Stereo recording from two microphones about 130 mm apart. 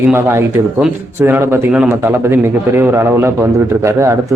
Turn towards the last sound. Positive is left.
turn(degrees=-20)  # may be behind; listen again after turning